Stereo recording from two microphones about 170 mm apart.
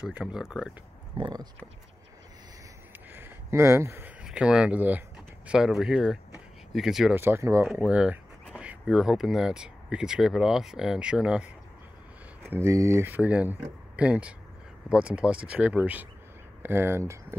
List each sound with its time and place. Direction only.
0.0 s speech: 5° right (ahead or behind)
1.1 s speech: 25° right (ahead or behind)
3.1 s a sound: 10° right (ahead or behind)
5.5 s speech: 5° right (ahead or behind)
7.2 s speech: 15° right (ahead or behind)
7.6 s speech: 5° right (ahead or behind)